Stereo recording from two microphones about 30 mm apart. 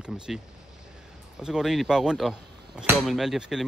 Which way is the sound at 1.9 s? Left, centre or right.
Right.